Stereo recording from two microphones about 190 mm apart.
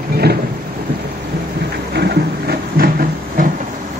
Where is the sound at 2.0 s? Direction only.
55° right (ahead or behind).